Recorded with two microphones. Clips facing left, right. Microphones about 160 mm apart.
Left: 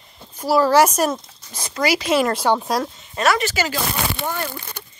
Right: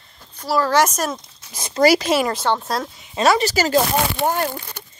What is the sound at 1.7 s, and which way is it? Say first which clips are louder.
Speech: right 5 dB; 35° right (ahead or behind).